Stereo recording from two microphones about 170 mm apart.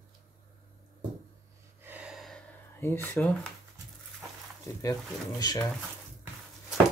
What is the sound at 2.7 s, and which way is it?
Speech, 15° left (ahead or behind).